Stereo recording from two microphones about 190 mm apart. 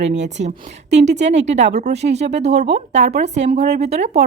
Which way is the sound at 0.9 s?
35° right (ahead or behind).